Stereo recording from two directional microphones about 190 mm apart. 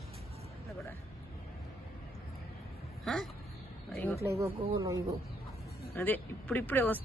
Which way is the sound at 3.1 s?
5° left (ahead or behind).